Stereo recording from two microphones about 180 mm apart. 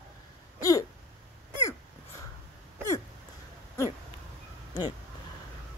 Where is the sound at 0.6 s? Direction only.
20° left (ahead or behind).